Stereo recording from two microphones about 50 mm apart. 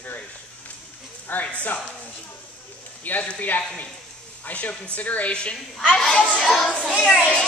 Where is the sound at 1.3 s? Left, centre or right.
Left.